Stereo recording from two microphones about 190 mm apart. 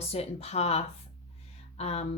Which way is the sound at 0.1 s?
35° left (ahead or behind).